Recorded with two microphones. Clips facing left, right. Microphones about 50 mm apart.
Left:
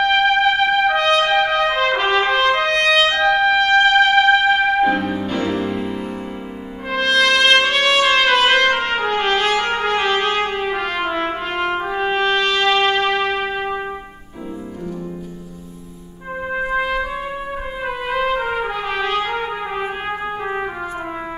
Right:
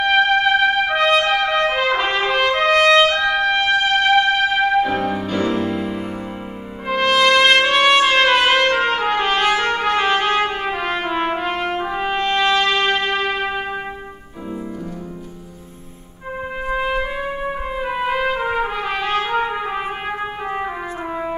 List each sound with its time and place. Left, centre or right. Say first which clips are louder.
0.0 s trumpet: even; centre
3.3 s music: left 3 dB; centre
6.9 s trumpet: right 1 dB; centre
11.1 s brass instrument: right 1 dB; centre
16.8 s trumpet: even; centre
17.8 s trumpet: even; centre